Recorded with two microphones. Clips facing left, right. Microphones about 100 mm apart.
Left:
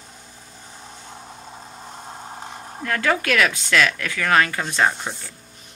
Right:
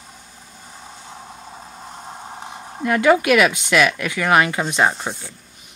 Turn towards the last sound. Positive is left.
turn(degrees=-15)  # may be behind; listen again after turning